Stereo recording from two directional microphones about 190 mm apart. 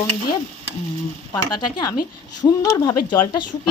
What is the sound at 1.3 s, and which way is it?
A woman's voice, 20° left (ahead or behind).